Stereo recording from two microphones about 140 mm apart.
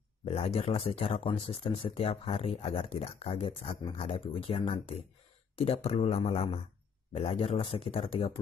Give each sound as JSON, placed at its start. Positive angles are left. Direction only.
{"t": 0.2, "sound": "speech", "side_deg": 45}
{"t": 5.6, "sound": "speech", "side_deg": 45}